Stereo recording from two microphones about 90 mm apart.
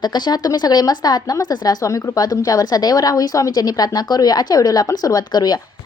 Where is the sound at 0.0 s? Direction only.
50° left (ahead or behind).